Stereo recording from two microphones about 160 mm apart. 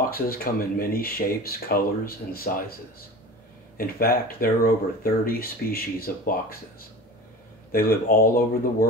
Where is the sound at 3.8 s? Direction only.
65° left (ahead or behind).